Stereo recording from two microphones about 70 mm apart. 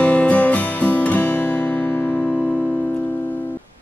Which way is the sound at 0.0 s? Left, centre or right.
Centre.